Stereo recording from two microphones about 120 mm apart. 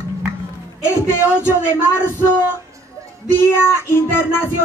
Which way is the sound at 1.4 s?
20° left (ahead or behind).